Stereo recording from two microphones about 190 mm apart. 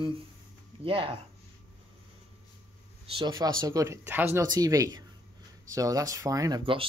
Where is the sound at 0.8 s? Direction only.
30° right (ahead or behind).